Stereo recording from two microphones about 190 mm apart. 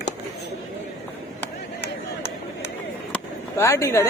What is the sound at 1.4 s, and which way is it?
Chop, 10° left (ahead or behind).